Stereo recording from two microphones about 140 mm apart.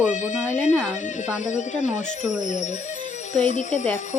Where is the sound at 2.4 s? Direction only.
60° left (ahead or behind).